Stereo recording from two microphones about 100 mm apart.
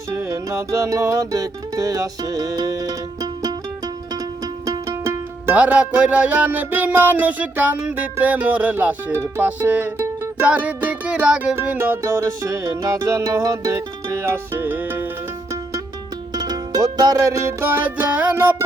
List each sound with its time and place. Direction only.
0.1 s music: 30° right (ahead or behind)
4.6 s music: 30° right (ahead or behind)
5.5 s music: 15° right (ahead or behind)
16.3 s music: 40° right (ahead or behind); by 18.5 s 15° right (ahead or behind)